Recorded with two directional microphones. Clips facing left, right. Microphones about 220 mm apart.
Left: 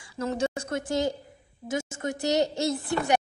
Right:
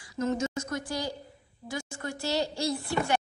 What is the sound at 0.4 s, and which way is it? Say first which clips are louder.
A woman's voice: left 3 dB; 30° left (ahead or behind).